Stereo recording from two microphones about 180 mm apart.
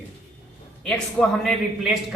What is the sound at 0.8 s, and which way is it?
A man's voice, 5° left (ahead or behind).